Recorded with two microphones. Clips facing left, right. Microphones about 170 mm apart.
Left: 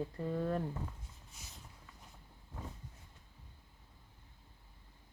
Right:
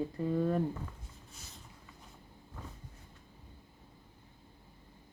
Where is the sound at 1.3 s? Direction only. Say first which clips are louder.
Right 3 dB; 15° left (ahead or behind).